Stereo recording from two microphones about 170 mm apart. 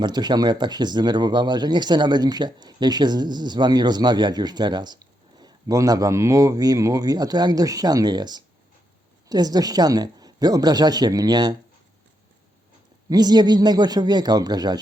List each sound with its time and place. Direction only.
0.0 s speech: 25° right (ahead or behind)
13.1 s speech: 25° right (ahead or behind)